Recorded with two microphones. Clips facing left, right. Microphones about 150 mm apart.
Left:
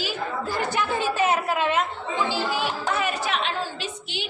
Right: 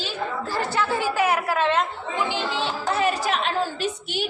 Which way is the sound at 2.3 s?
25° right (ahead or behind).